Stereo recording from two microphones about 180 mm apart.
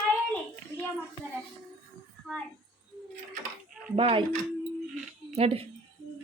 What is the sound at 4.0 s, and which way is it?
Speech, 30° right (ahead or behind).